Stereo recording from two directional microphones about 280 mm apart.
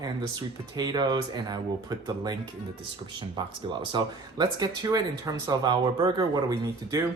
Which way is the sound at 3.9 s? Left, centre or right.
Centre.